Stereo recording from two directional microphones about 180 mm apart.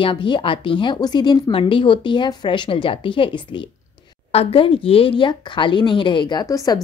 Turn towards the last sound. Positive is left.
turn(degrees=20)  # may be behind; listen again after turning